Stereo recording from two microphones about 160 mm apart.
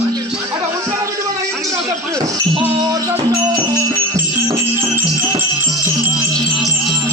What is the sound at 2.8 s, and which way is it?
Music, 20° right (ahead or behind).